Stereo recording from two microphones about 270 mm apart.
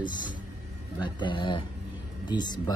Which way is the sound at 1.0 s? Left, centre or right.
Centre.